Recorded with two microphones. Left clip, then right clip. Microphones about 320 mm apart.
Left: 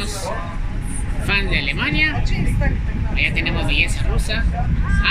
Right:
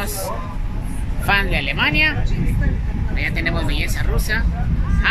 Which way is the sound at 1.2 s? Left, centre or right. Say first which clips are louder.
Right 2 dB; centre.